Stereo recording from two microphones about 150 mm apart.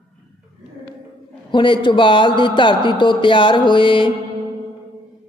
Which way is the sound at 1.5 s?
35° left (ahead or behind).